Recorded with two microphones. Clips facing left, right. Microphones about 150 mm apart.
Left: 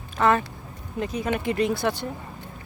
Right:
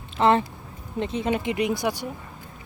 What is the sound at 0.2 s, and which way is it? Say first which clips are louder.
Speech: right 2 dB; 25° right (ahead or behind).